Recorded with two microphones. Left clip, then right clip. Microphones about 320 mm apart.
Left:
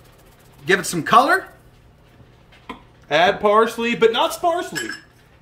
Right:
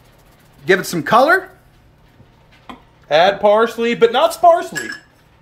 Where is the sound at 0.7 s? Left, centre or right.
Centre.